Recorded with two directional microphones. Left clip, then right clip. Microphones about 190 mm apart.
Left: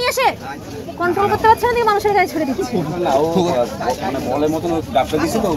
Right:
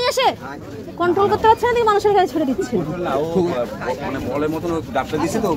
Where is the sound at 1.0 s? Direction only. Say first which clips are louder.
Even; 30° right (ahead or behind).